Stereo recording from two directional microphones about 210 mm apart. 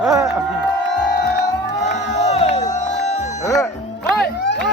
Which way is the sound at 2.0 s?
30° left (ahead or behind).